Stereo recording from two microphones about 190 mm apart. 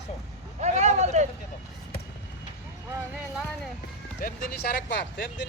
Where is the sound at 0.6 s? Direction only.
35° right (ahead or behind).